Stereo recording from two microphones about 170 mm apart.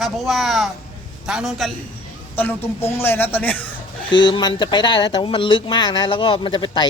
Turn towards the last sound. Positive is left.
turn(degrees=30)  # may be behind; listen again after turning